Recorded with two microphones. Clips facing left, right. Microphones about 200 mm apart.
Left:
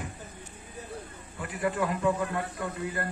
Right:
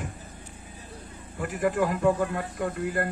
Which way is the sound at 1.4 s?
45° right (ahead or behind).